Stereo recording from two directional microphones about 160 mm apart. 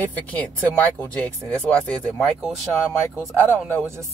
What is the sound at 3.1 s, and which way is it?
Speech, 15° right (ahead or behind).